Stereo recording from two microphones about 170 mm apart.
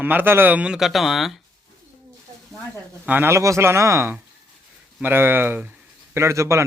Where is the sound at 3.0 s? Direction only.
10° right (ahead or behind).